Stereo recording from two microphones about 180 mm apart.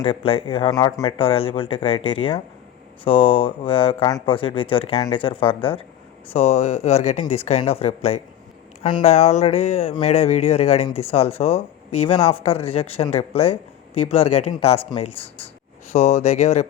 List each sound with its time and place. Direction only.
0.0 s speech: 30° left (ahead or behind)